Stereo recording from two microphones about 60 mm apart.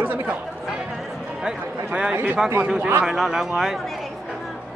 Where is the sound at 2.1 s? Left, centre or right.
Right.